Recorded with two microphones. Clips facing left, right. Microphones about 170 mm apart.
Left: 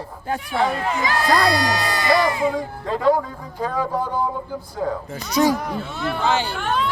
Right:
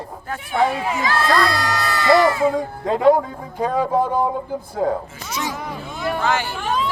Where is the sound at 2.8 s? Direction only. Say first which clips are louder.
Right 4 dB; 20° right (ahead or behind).